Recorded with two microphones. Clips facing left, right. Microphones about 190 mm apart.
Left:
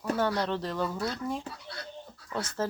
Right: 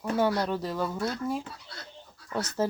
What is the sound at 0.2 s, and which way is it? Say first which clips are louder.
Speech: right 5 dB; 10° right (ahead or behind).